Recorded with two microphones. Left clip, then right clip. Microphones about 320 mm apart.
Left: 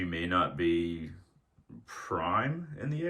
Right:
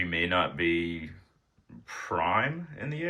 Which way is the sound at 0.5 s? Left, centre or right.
Left.